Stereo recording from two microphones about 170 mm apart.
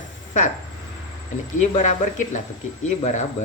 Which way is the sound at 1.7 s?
45° left (ahead or behind).